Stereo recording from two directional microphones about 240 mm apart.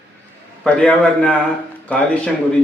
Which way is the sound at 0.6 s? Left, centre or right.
Centre.